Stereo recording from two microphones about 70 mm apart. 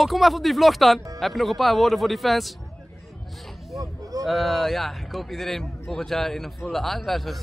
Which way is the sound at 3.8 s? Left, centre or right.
Right.